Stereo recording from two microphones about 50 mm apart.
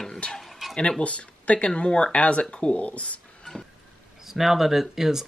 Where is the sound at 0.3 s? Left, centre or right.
Centre.